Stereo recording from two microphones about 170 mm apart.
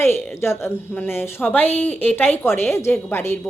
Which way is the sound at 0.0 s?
10° left (ahead or behind).